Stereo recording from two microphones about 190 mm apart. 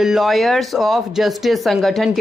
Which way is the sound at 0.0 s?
Centre (ahead or behind).